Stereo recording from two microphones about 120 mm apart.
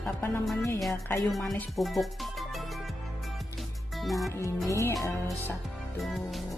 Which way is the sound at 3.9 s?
Centre (ahead or behind).